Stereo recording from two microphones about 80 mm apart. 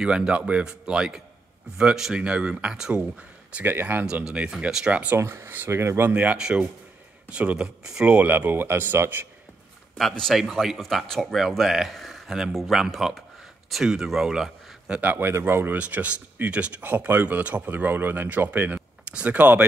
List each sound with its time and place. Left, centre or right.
0.0 s speech: centre
4.0 s speech: centre
5.1 s speech: right
6.1 s speech: centre
8.3 s speech: right
9.9 s speech: centre
15.0 s speech: right
15.8 s speech: centre
18.8 s a sound: centre